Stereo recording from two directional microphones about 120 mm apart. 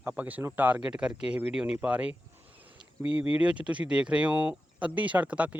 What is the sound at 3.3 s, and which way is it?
Speech, 10° right (ahead or behind).